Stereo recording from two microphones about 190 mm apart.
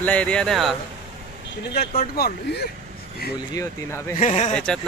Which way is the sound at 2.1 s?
55° left (ahead or behind).